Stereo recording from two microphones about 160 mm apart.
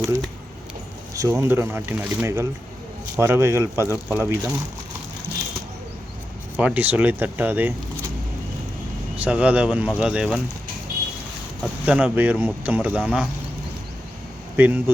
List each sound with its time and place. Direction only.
1.1 s speech: 20° right (ahead or behind)
6.6 s speech: 10° right (ahead or behind)
9.1 s speech: 10° right (ahead or behind)
11.6 s speech: 5° right (ahead or behind)
14.5 s speech: 10° right (ahead or behind)